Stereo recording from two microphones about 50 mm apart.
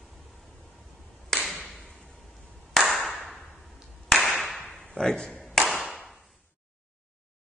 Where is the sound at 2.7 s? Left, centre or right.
Centre.